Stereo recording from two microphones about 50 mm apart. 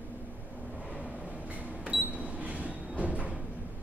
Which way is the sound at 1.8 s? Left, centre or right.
Right.